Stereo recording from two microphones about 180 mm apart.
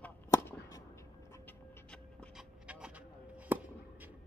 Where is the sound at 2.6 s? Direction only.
5° right (ahead or behind).